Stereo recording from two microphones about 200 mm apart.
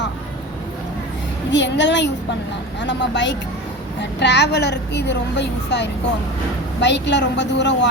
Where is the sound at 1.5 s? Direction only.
65° left (ahead or behind).